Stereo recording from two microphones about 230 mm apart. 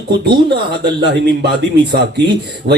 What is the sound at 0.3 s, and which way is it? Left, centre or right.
Speech, right.